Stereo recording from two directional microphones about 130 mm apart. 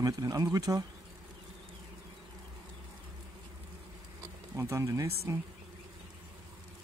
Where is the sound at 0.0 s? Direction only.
25° right (ahead or behind).